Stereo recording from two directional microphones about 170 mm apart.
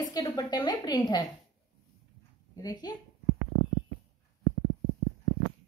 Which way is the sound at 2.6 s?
25° left (ahead or behind).